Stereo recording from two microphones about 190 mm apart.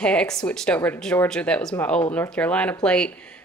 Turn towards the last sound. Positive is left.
turn(degrees=5)  # may be behind; listen again after turning